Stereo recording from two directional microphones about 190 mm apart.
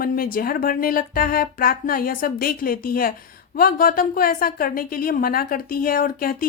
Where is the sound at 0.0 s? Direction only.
50° left (ahead or behind).